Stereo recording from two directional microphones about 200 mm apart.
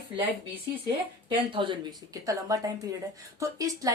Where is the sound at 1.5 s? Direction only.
25° right (ahead or behind).